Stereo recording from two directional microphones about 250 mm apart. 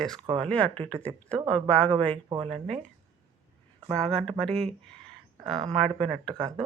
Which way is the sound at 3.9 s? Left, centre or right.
Centre.